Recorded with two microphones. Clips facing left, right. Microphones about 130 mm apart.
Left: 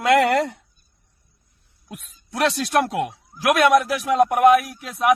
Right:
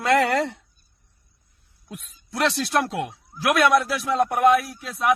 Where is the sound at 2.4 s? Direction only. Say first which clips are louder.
Left 2 dB; 50° left (ahead or behind).